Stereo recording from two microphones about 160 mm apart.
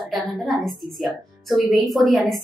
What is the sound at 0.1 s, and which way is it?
A woman's voice, centre (ahead or behind).